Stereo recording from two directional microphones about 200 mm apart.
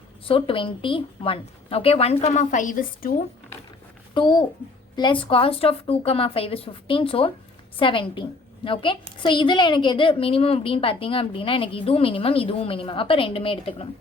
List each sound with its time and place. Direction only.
0.3 s a woman's voice: 25° left (ahead or behind); by 3.1 s 40° left (ahead or behind)
4.1 s a woman's voice: 25° left (ahead or behind)